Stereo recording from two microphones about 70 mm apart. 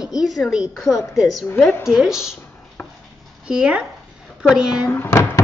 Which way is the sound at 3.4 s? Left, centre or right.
Centre.